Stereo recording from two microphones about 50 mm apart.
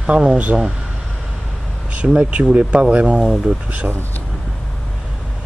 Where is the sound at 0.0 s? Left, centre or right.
Centre.